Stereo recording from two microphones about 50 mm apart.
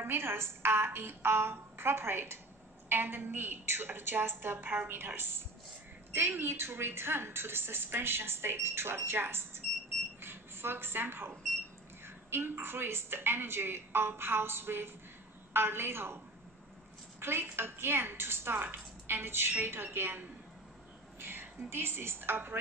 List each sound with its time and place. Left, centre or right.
0.0 s a woman's voice: right
2.9 s a woman's voice: right
17.2 s a woman's voice: right